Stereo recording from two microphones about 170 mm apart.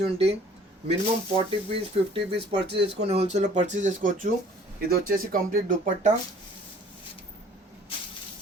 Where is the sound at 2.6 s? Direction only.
80° right.